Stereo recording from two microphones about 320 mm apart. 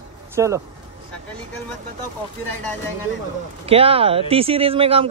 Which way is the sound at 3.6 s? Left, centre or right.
Centre.